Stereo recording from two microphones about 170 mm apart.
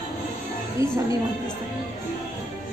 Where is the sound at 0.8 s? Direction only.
20° right (ahead or behind).